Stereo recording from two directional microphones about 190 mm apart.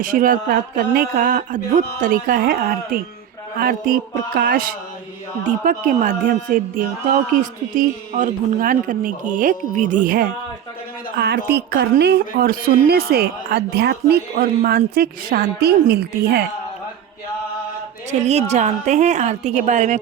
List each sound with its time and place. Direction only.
0.0 s speech: 45° right (ahead or behind)
11.2 s a woman's voice: 60° right (ahead or behind)
18.1 s a woman's voice: 35° right (ahead or behind)